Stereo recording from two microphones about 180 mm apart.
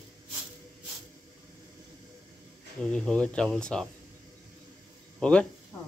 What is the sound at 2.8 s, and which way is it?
Speech, 5° left (ahead or behind).